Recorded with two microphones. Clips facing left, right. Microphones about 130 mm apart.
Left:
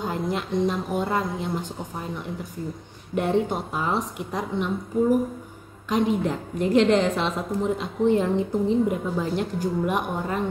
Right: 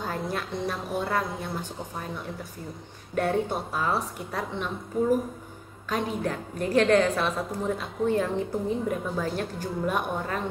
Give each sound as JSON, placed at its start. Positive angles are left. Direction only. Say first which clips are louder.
{"t": 0.0, "sound": "a woman's voice", "louder": "left 4 dB", "side_deg": 20}
{"t": 3.2, "sound": "a woman's voice", "louder": "left 3 dB", "side_deg": 20}
{"t": 5.9, "sound": "a woman's voice", "louder": "left 6 dB", "side_deg": 20}